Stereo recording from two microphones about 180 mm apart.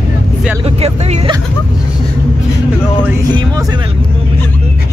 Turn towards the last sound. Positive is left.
turn(degrees=-20)  # may be behind; listen again after turning